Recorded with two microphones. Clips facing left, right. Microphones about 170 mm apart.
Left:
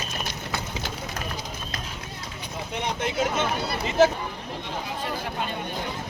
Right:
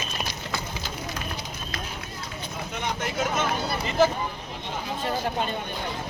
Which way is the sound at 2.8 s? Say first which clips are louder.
Left 2 dB; 25° left (ahead or behind).